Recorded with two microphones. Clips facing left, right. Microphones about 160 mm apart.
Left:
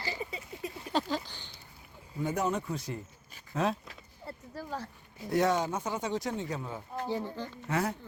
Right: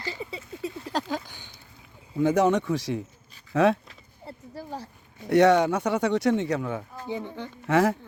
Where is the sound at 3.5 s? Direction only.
75° right (ahead or behind).